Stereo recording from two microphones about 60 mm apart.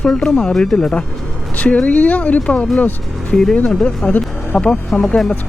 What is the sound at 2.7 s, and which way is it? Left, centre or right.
Music, left.